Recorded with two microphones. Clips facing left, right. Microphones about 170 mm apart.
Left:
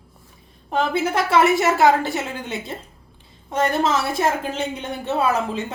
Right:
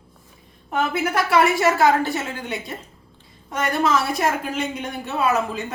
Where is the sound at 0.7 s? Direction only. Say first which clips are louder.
Left 1 dB; 30° left (ahead or behind).